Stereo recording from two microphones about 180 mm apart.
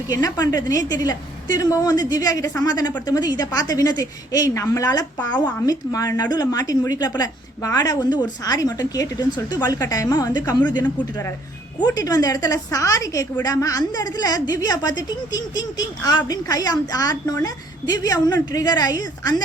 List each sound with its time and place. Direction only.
0.1 s a woman's voice: 20° left (ahead or behind)
5.1 s speech: 5° left (ahead or behind)
5.6 s a woman's voice: 20° left (ahead or behind)
11.8 s a woman's voice: 20° left (ahead or behind)